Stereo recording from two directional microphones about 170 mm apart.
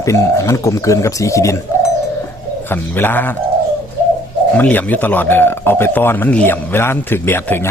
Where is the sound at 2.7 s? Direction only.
10° left (ahead or behind).